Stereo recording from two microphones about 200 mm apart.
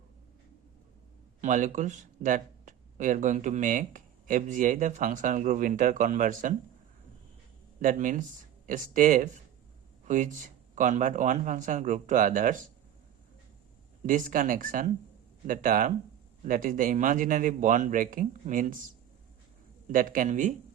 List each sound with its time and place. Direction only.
1.4 s speech: 40° right (ahead or behind)
7.8 s speech: 40° right (ahead or behind)
14.1 s speech: 45° right (ahead or behind)
19.9 s speech: 45° right (ahead or behind)